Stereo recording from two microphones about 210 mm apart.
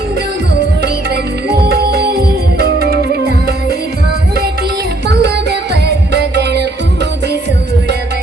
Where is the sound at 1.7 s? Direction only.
50° right (ahead or behind).